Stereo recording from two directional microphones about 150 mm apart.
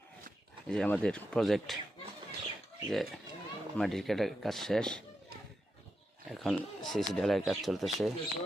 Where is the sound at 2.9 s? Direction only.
Centre (ahead or behind).